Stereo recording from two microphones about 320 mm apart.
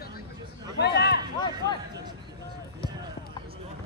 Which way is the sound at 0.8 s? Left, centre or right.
Left.